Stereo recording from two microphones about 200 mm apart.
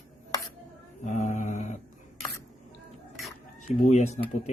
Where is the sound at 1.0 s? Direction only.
35° left (ahead or behind).